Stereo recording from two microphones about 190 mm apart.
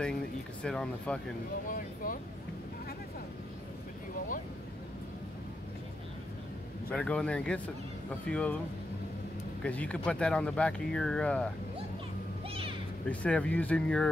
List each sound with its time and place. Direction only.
0.6 s speech: 5° left (ahead or behind)
1.7 s speech: 45° left (ahead or behind)
6.9 s speech: 5° left (ahead or behind)
9.6 s speech: 5° left (ahead or behind)
12.4 s a sound: 30° right (ahead or behind)
13.1 s speech: 5° left (ahead or behind)